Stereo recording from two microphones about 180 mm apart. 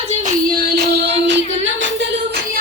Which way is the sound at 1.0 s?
85° right.